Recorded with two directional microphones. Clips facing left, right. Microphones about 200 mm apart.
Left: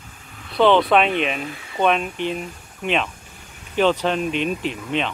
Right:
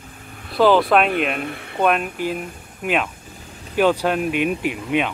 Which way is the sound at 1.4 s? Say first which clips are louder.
Right 3 dB; 60° right (ahead or behind).